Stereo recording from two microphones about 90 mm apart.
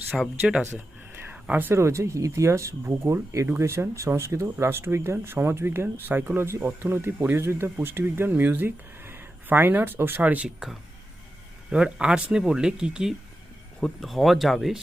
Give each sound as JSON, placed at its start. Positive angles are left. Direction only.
{"t": 0.1, "sound": "speech", "side_deg": -5}
{"t": 0.7, "sound": "speech", "side_deg": -20}